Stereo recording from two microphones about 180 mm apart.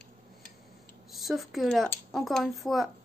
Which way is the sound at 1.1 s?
Centre (ahead or behind).